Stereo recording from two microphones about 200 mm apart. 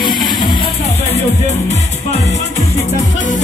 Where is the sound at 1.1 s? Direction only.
35° left (ahead or behind).